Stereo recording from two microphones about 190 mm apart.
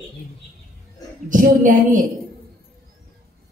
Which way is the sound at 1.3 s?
45° right (ahead or behind).